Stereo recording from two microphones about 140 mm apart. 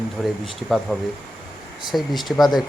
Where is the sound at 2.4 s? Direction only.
30° left (ahead or behind).